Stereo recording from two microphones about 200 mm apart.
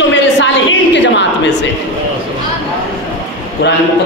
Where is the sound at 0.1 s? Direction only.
65° left (ahead or behind).